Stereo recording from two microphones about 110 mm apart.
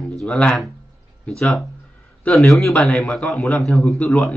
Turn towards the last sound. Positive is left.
turn(degrees=5)  # may be behind; listen again after turning